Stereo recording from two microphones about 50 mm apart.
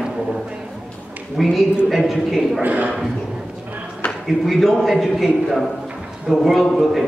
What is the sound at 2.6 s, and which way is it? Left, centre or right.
Speech, right.